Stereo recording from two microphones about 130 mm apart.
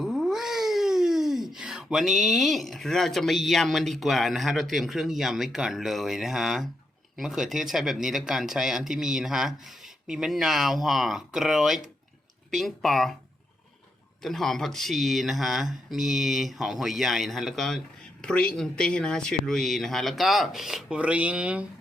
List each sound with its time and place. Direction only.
0.0 s speech: 5° right (ahead or behind)
14.2 s speech: centre (ahead or behind)